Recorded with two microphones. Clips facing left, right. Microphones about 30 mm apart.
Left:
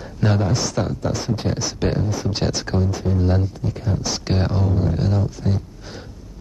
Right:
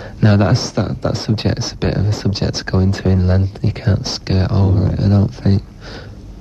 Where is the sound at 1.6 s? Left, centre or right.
Right.